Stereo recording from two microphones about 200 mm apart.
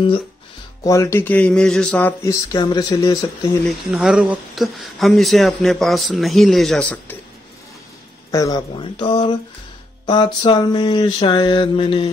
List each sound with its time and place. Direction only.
0.8 s speech: 15° left (ahead or behind)
2.2 s mantra: 20° left (ahead or behind)
3.6 s speech: centre (ahead or behind)
8.3 s mantra: 15° left (ahead or behind)